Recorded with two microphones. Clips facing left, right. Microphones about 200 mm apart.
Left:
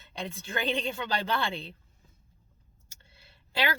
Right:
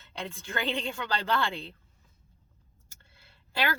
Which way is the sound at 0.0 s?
15° left (ahead or behind).